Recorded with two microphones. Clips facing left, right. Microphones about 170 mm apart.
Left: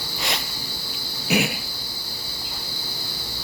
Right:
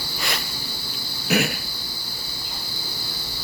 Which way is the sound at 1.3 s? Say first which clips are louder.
Even; 15° left (ahead or behind).